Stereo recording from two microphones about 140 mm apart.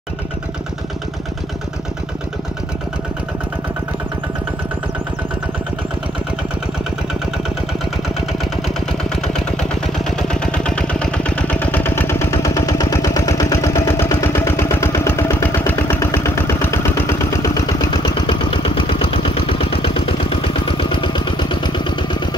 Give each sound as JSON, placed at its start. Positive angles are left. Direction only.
{"t": 8.3, "sound": "engine", "side_deg": 0}